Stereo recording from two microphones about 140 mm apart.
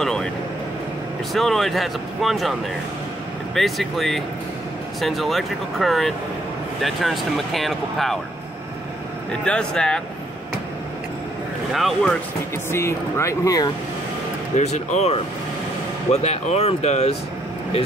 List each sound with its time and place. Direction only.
0.0 s vehicle: 5° left (ahead or behind)
1.3 s speech: centre (ahead or behind)
3.5 s speech: centre (ahead or behind)
9.4 s speech: 5° left (ahead or behind)
11.7 s speech: centre (ahead or behind)
12.7 s speech: 20° left (ahead or behind)
14.6 s speech: 50° left (ahead or behind)